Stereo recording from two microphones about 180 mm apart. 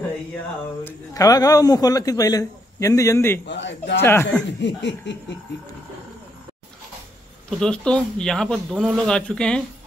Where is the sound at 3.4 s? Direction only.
80° left.